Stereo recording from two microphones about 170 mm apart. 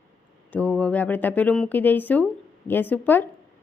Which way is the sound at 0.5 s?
10° left (ahead or behind).